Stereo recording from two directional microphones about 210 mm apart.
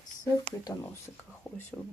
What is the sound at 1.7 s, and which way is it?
Speech, 5° right (ahead or behind).